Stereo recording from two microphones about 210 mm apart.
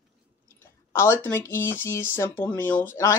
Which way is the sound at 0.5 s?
10° left (ahead or behind).